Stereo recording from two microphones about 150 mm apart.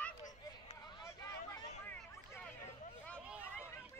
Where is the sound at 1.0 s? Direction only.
20° left (ahead or behind).